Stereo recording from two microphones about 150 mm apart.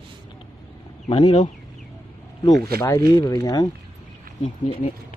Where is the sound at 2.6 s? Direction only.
90° right.